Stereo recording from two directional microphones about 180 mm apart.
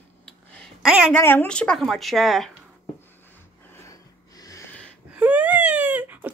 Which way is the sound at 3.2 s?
10° left (ahead or behind).